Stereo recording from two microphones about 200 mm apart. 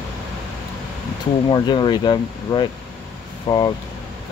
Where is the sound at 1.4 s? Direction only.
20° left (ahead or behind).